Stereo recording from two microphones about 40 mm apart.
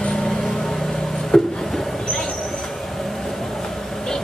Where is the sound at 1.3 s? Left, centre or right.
Centre.